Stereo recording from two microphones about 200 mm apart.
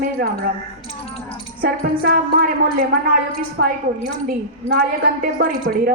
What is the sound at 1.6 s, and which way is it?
Speech, 45° right (ahead or behind).